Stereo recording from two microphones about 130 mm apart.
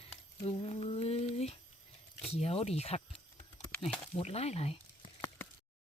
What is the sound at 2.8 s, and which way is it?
Speech, 55° left (ahead or behind).